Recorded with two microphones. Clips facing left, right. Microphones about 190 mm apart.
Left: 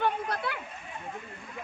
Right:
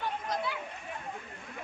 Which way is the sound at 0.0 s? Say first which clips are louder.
Left 4 dB; 65° left (ahead or behind).